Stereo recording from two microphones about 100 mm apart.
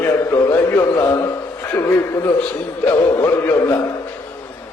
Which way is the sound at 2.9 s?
35° left (ahead or behind).